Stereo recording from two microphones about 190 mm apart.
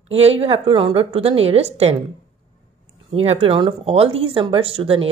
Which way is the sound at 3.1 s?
30° right (ahead or behind).